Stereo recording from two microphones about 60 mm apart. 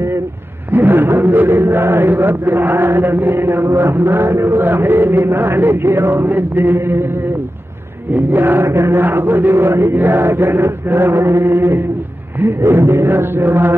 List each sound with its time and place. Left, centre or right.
0.7 s a man's voice: right
8.1 s a man's voice: right
8.6 s chant: right
9.0 s a man's voice: right